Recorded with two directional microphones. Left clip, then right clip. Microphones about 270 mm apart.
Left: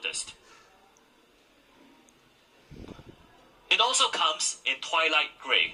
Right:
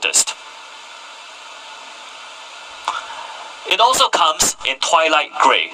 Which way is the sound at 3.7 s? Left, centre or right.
Right.